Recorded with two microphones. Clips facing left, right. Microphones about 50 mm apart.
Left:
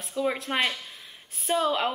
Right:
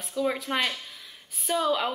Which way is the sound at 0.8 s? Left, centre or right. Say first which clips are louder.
Even; centre.